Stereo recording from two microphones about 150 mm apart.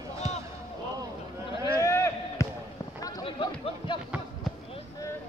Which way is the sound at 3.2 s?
35° left (ahead or behind).